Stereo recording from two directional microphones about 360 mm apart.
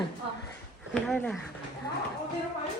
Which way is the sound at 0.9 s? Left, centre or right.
Centre.